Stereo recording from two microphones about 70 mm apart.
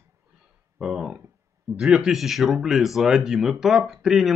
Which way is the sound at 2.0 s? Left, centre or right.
Centre.